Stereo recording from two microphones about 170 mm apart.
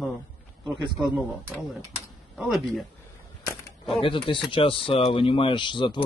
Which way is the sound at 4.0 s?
30° left (ahead or behind).